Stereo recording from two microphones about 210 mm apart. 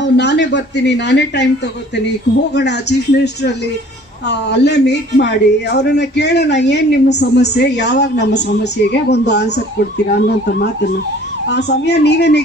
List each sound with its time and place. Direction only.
0.0 s a woman's voice: 55° left (ahead or behind)
2.5 s speech: 55° left (ahead or behind)
4.3 s a woman's voice: 55° left (ahead or behind)